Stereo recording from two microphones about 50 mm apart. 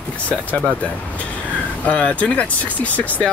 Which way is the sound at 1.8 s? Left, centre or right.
Left.